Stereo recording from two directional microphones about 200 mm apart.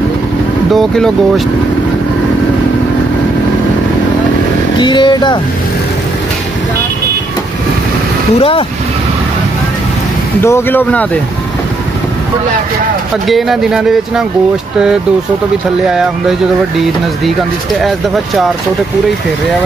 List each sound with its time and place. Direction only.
0.7 s speech: centre (ahead or behind)
4.7 s speech: 25° left (ahead or behind)
8.4 s speech: 25° left (ahead or behind)
10.4 s speech: 10° left (ahead or behind)
13.3 s speech: centre (ahead or behind)
15.9 s speech: centre (ahead or behind)
17.7 s speech: centre (ahead or behind)